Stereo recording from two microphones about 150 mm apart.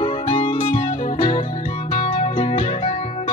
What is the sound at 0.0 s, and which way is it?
Music, 35° left (ahead or behind).